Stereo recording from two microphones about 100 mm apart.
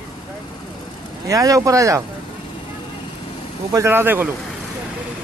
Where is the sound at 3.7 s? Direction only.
30° right (ahead or behind).